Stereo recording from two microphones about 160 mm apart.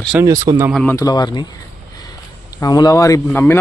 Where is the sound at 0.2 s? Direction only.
20° right (ahead or behind).